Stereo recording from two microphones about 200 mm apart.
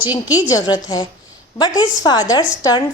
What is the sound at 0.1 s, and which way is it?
A woman's voice, 20° left (ahead or behind).